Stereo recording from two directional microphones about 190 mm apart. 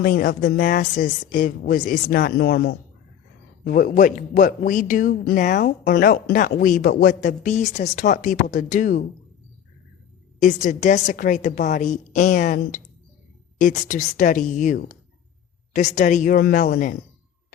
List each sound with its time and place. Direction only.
0.0 s speech: 50° left (ahead or behind)
3.6 s speech: 45° left (ahead or behind)
10.4 s a woman's voice: 40° left (ahead or behind)